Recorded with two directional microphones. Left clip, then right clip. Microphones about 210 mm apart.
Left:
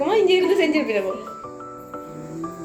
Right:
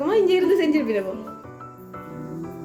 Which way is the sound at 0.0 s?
55° right (ahead or behind).